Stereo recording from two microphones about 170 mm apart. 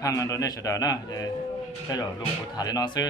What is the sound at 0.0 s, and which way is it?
A man's voice, 20° left (ahead or behind).